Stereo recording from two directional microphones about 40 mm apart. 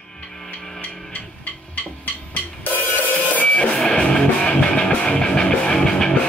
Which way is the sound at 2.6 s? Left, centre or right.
Left.